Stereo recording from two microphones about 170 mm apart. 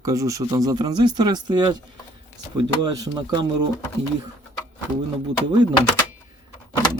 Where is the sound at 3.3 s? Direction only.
25° right (ahead or behind).